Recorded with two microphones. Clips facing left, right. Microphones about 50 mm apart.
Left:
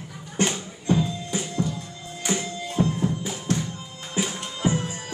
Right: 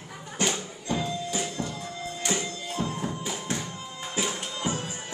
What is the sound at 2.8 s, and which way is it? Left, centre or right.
Music, left.